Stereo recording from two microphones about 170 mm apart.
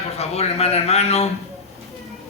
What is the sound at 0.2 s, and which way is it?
A man's voice, 40° left (ahead or behind).